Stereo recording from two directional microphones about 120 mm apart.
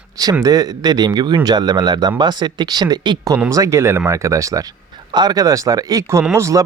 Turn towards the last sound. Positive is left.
turn(degrees=-25)  # may be behind; listen again after turning